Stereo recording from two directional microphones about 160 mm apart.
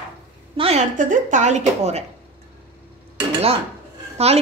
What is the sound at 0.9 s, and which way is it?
A woman's voice, 50° right (ahead or behind).